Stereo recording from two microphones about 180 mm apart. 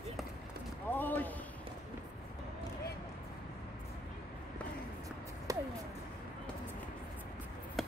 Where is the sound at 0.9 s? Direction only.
10° left (ahead or behind).